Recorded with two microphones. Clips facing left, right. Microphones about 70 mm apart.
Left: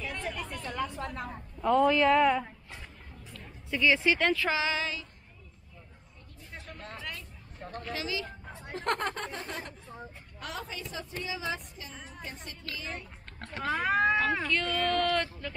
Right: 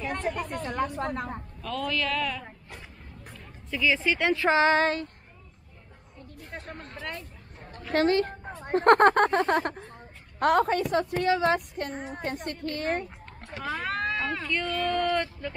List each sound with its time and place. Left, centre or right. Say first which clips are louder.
0.0 s speech: right 6 dB; right
1.6 s speech: left 8 dB; left
3.7 s speech: even; centre
4.5 s a sound: right 9 dB; right
6.5 s vehicle: right 4 dB; right
7.0 s hubbub: right 6 dB; right
7.9 s a sound: right 14 dB; right
8.5 s a woman's voice: right 13 dB; right
13.7 s speech: left 5 dB; centre
14.7 s speech: right 3 dB; centre
15.0 s speech: right 3 dB; right